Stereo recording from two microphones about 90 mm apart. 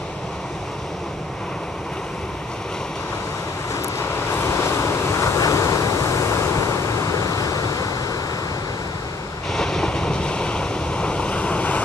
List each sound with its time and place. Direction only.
4.3 s waves: 30° left (ahead or behind)
9.5 s waves: 5° left (ahead or behind)